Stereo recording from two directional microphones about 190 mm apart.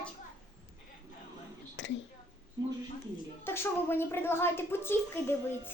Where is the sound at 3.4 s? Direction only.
10° left (ahead or behind).